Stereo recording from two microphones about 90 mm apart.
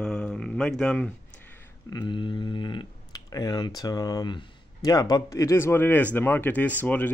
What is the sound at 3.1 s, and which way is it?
Computer keyboard, 45° left (ahead or behind).